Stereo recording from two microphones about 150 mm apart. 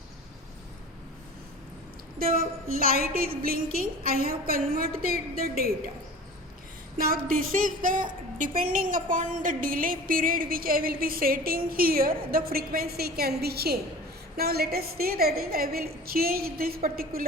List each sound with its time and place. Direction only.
2.1 s a woman's voice: 75° right (ahead or behind)
7.0 s a woman's voice: 70° right (ahead or behind)